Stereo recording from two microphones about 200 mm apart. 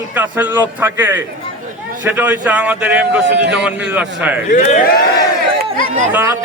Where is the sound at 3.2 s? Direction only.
60° right (ahead or behind).